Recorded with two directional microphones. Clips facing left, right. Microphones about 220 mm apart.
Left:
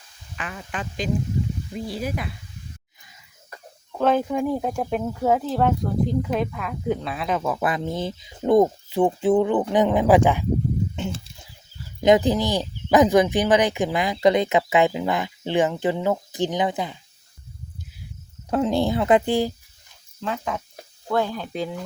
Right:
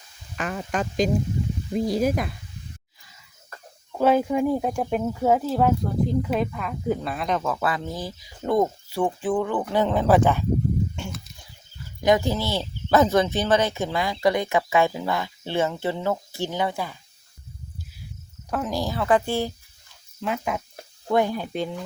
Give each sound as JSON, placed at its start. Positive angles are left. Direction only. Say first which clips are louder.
{"t": 0.3, "sound": "speech", "louder": "right 6 dB", "side_deg": -45}
{"t": 3.9, "sound": "speech", "louder": "right 1 dB", "side_deg": -10}
{"t": 10.9, "sound": "a sound", "louder": "left 5 dB", "side_deg": 25}
{"t": 11.9, "sound": "speech", "louder": "left 4 dB", "side_deg": 20}
{"t": 18.5, "sound": "speech", "louder": "left 6 dB", "side_deg": 25}
{"t": 20.2, "sound": "sizzle", "louder": "right 1 dB", "side_deg": -10}
{"t": 21.5, "sound": "speech", "louder": "even", "side_deg": 0}